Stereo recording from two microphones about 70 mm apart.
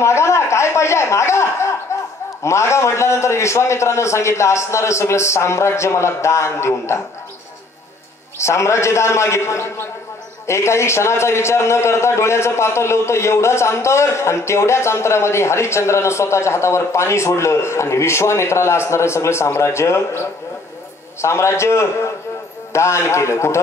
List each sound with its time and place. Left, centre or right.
0.0 s a man's voice: left
8.4 s a man's voice: left